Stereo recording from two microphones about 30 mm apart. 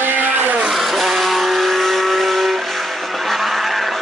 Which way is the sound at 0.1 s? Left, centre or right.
Right.